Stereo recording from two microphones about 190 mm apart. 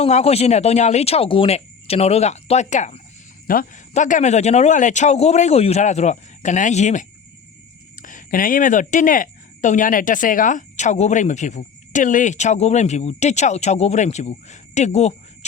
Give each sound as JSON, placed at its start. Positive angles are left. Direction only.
{"t": 0.0, "sound": "speech", "side_deg": 35}